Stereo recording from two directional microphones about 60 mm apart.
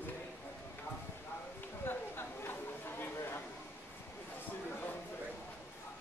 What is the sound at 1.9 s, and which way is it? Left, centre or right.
Chatter, left.